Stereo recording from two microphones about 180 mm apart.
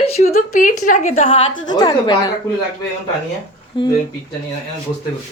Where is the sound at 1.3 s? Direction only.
30° left (ahead or behind).